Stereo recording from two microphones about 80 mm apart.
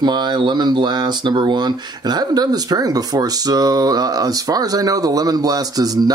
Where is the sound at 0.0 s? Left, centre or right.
Right.